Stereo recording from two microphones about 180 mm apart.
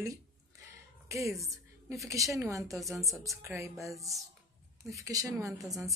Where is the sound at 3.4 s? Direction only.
15° right (ahead or behind).